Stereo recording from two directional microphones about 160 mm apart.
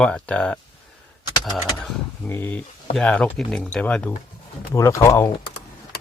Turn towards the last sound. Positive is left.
turn(degrees=15)  # may be behind; listen again after turning